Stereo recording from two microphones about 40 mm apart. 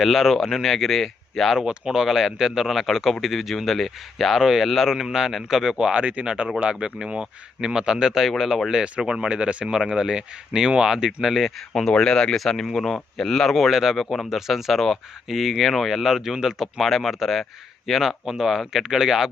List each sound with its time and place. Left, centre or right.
0.0 s a man's voice: centre
1.6 s a man's voice: centre
5.9 s a man's voice: right; by 8.7 s centre
9.0 s speech: centre
9.7 s speech: centre
11.3 s a man's voice: centre
11.7 s speech: centre
14.3 s a man's voice: centre
16.8 s a man's voice: centre